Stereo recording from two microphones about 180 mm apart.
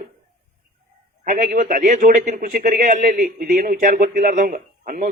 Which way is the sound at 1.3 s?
45° right (ahead or behind).